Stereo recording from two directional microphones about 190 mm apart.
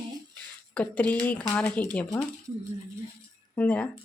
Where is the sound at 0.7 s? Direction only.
5° left (ahead or behind).